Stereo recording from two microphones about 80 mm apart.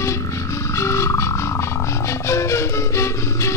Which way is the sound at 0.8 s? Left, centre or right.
Left.